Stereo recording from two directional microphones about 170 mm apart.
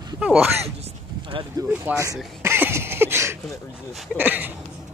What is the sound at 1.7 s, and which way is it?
Speech, 10° right (ahead or behind).